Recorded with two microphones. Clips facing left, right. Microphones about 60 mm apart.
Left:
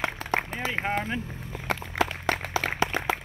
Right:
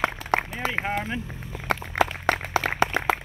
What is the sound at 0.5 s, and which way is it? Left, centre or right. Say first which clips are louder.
Run: right 2 dB; left.